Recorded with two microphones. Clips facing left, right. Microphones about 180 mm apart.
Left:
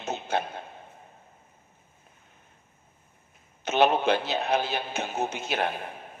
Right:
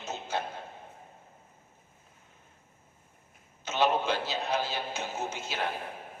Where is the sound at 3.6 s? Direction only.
60° left (ahead or behind).